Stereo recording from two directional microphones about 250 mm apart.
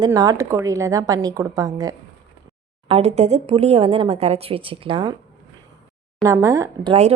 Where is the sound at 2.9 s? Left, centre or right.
Right.